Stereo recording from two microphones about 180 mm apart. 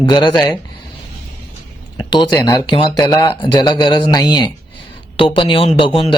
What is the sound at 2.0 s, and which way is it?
A man's voice, 25° left (ahead or behind).